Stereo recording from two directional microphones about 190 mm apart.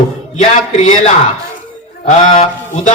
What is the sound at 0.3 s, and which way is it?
Speech, 35° left (ahead or behind).